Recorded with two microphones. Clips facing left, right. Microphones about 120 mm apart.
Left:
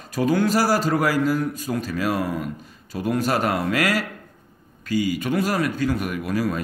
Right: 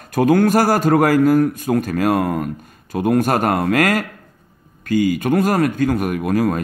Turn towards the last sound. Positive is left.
turn(degrees=-50)  # may be behind; listen again after turning